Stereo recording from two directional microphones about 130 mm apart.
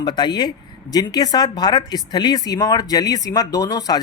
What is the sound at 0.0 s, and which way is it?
A woman's voice, 35° left (ahead or behind).